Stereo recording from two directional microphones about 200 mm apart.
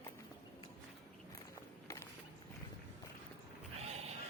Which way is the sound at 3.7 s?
30° right (ahead or behind).